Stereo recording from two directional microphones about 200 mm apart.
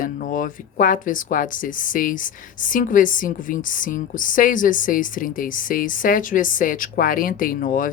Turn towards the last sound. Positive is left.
turn(degrees=45)  # may be behind; listen again after turning